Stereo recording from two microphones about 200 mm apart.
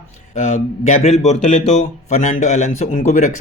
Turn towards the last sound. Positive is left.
turn(degrees=35)  # may be behind; listen again after turning